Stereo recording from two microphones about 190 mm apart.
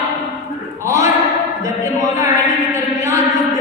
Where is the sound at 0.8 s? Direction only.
15° right (ahead or behind).